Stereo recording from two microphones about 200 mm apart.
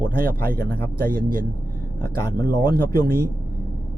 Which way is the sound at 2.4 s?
50° right (ahead or behind).